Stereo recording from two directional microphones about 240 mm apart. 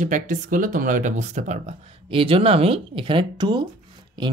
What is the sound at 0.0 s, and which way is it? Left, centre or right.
Speech, right.